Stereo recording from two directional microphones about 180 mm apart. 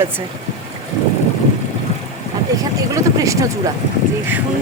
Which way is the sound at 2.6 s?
20° right (ahead or behind).